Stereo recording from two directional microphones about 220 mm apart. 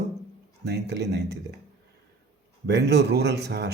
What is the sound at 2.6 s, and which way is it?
Speech, 50° right (ahead or behind).